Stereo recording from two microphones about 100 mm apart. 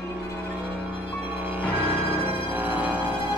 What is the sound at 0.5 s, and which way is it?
Music, 20° right (ahead or behind).